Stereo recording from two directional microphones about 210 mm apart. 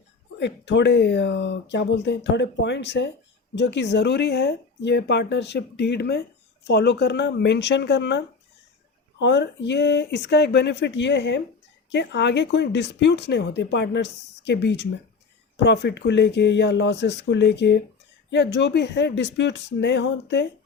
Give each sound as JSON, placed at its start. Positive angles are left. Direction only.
{"t": 0.3, "sound": "speech", "side_deg": 55}